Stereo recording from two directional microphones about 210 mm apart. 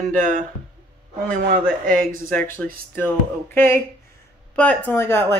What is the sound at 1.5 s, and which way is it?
Speech, 40° right (ahead or behind).